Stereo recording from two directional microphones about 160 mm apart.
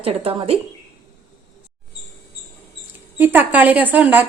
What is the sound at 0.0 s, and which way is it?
Speech, 35° right (ahead or behind).